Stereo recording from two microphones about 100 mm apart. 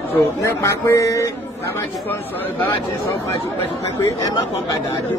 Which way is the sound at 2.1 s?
20° left (ahead or behind).